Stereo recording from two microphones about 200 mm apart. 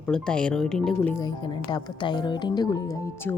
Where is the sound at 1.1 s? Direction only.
20° left (ahead or behind).